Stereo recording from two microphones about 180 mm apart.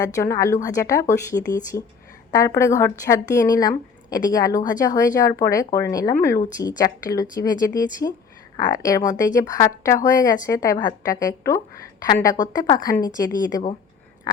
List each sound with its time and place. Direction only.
0.0 s a woman's voice: 15° left (ahead or behind)